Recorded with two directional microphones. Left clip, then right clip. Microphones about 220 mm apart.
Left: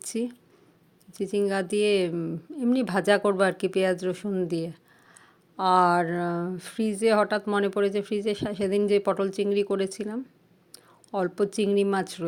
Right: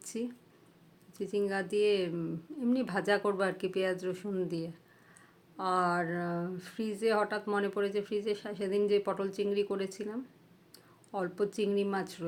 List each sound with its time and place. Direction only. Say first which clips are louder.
0.0 s speech: left 7 dB; 35° left (ahead or behind)